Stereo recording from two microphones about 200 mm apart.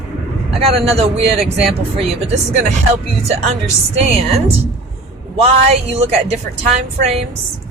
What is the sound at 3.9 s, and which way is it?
Speech, 30° right (ahead or behind).